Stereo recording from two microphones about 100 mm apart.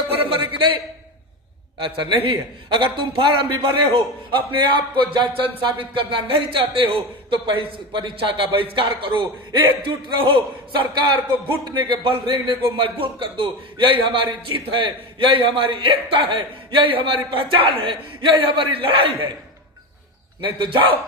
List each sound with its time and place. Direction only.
0.3 s a man's voice: 60° right (ahead or behind)
2.2 s a man's voice: 55° right (ahead or behind)
20.4 s a man's voice: 55° right (ahead or behind)